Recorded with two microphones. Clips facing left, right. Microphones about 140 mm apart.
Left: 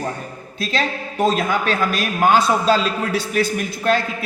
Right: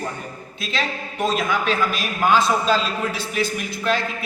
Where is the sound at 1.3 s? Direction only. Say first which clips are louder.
Left 2 dB; 50° left (ahead or behind).